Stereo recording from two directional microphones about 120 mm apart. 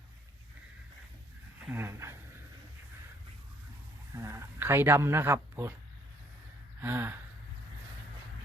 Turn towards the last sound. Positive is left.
turn(degrees=-20)  # may be behind; listen again after turning